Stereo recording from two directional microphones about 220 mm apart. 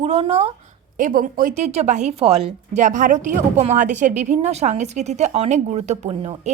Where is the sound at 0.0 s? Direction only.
30° right (ahead or behind).